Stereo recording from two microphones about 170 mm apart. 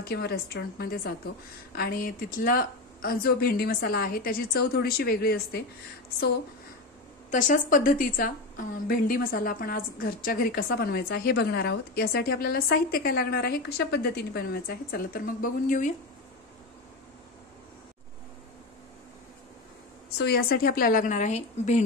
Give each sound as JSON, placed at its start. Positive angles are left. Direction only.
{"t": 0.0, "sound": "a woman's voice", "side_deg": 70}
{"t": 7.2, "sound": "a woman's voice", "side_deg": 50}
{"t": 20.2, "sound": "a woman's voice", "side_deg": 65}